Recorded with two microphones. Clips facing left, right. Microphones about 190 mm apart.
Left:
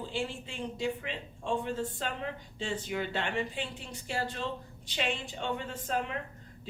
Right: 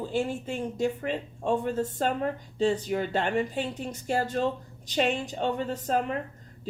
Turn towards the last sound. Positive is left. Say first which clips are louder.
# right 6 dB
turn(degrees=-40)  # may be behind; listen again after turning